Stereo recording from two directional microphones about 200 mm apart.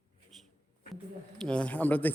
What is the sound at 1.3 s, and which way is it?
Speech, 5° left (ahead or behind).